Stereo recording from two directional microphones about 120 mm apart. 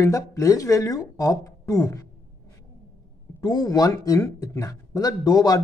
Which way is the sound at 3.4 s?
35° left (ahead or behind).